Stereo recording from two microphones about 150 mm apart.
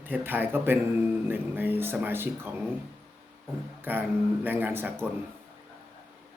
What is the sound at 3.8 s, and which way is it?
Speech, 15° right (ahead or behind).